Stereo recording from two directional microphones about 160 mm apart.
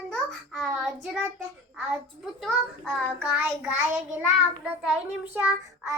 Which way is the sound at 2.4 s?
Centre (ahead or behind).